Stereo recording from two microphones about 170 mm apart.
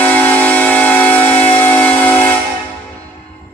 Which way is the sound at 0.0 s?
10° left (ahead or behind).